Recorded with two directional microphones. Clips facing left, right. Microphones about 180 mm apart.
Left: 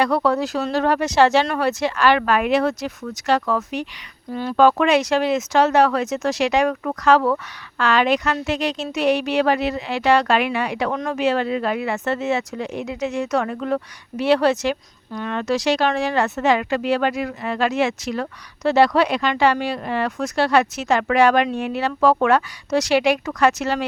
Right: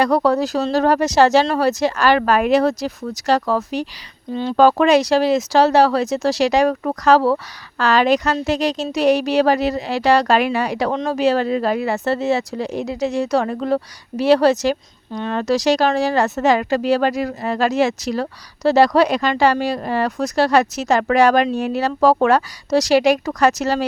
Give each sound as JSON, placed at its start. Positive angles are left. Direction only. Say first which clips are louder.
{"t": 0.0, "sound": "speech", "louder": "right 3 dB", "side_deg": -40}
{"t": 4.3, "sound": "speech", "louder": "right 3 dB", "side_deg": -25}
{"t": 4.5, "sound": "speech", "louder": "right 3 dB", "side_deg": -35}